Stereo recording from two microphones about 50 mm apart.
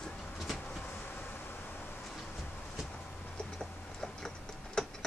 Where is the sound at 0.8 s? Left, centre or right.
Left.